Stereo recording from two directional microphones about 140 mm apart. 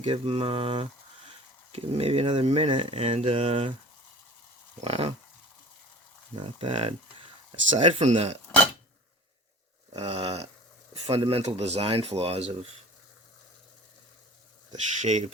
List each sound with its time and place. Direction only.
0.0 s a sound: 40° right (ahead or behind)
1.7 s speech: 45° right (ahead or behind)
4.8 s speech: 45° right (ahead or behind)
6.3 s a sound: 35° right (ahead or behind)
7.8 s speech: 50° right (ahead or behind)
9.9 s speech: 45° right (ahead or behind)
15.0 s speech: 55° right (ahead or behind)